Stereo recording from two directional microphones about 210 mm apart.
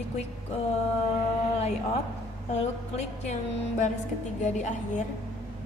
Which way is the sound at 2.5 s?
30° left (ahead or behind).